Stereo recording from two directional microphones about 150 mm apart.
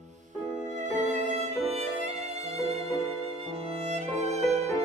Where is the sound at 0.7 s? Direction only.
50° right (ahead or behind).